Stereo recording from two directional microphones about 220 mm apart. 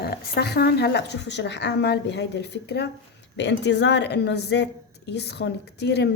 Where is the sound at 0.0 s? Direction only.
45° left (ahead or behind).